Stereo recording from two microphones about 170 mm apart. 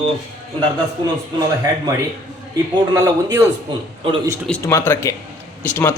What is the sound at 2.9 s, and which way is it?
Speech, 20° right (ahead or behind).